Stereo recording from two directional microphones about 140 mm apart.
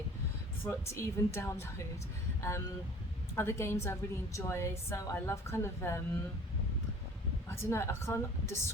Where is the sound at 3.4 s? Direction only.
20° left (ahead or behind).